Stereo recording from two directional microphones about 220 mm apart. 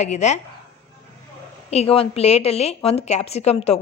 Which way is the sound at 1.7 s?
25° left (ahead or behind).